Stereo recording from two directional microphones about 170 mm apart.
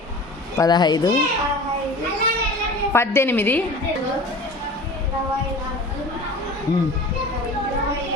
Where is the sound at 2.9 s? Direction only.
15° left (ahead or behind).